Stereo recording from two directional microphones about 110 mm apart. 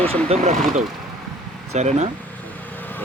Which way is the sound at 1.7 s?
90° right.